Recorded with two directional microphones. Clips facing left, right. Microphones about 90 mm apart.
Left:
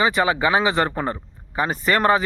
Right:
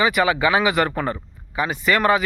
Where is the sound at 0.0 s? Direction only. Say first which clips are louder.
Right 1 dB; 30° left (ahead or behind).